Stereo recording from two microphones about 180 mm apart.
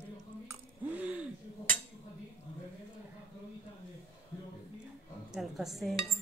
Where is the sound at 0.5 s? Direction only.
10° right (ahead or behind).